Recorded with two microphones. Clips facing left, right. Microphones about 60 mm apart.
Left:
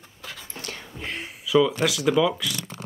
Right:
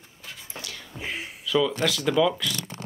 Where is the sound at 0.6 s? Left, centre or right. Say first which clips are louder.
Left 2 dB; left.